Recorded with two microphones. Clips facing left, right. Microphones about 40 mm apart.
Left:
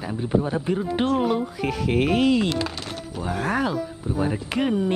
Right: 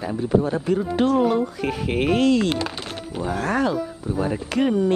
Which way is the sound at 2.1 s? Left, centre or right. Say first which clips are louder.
Right 4 dB; centre.